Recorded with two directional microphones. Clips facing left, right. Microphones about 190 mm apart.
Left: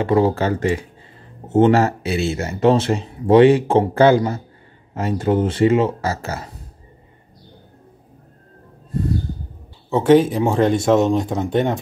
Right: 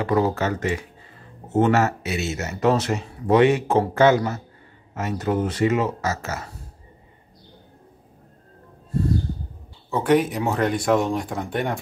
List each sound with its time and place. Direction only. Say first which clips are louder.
0.0 s speech: left 4 dB; 25° left (ahead or behind)
9.8 s speech: left 6 dB; 25° left (ahead or behind)